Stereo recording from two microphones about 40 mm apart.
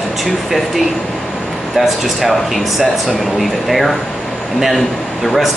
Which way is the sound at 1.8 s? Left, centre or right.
Centre.